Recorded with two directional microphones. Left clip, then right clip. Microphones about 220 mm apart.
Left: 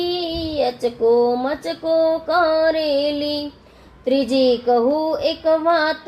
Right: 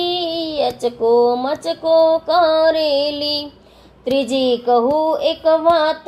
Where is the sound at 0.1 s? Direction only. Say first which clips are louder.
Right 3 dB; 15° right (ahead or behind).